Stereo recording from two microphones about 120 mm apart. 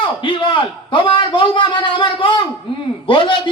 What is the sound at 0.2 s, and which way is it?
A man's voice, 45° left (ahead or behind).